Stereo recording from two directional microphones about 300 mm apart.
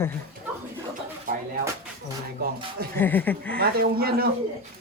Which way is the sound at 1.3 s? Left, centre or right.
Right.